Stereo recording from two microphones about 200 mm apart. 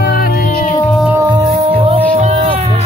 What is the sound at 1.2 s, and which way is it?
Music, 20° right (ahead or behind).